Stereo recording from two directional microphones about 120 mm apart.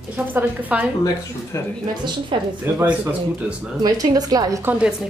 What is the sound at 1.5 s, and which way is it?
Speech, 25° left (ahead or behind).